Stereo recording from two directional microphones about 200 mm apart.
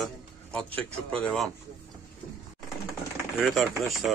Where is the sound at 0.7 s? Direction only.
5° left (ahead or behind).